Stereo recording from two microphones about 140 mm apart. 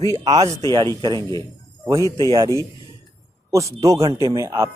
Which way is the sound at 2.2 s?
30° right (ahead or behind).